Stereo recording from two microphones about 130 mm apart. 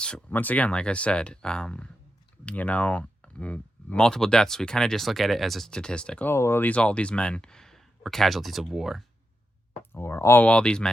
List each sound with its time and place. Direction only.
0.0 s speech: 10° left (ahead or behind)
6.3 s speech: 20° left (ahead or behind); by 9.0 s centre (ahead or behind)
9.9 s speech: 20° left (ahead or behind)
10.4 s speech: 10° left (ahead or behind)